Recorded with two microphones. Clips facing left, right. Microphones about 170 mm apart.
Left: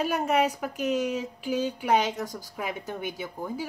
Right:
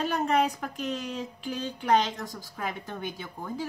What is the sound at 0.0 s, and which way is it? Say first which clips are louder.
Speech: left 1 dB; 10° left (ahead or behind).